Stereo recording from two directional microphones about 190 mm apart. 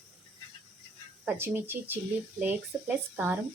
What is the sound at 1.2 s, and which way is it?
Speech, 10° right (ahead or behind).